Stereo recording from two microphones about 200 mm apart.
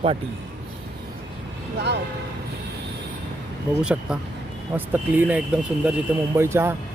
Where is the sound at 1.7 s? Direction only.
55° right (ahead or behind).